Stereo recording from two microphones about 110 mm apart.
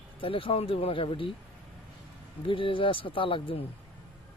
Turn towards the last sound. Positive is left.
turn(degrees=50)  # may be behind; listen again after turning